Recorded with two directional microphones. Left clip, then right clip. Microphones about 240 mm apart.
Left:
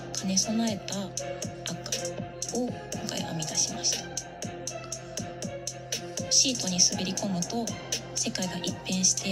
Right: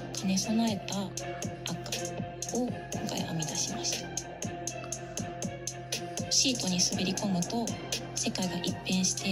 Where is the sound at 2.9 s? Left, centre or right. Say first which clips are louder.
Left 1 dB; left.